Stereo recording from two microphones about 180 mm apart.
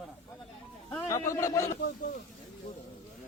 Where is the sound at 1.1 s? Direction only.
15° left (ahead or behind).